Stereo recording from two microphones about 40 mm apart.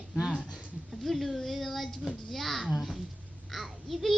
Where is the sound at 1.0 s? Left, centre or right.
Centre.